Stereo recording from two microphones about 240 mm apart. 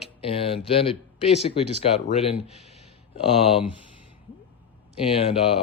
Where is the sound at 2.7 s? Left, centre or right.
Left.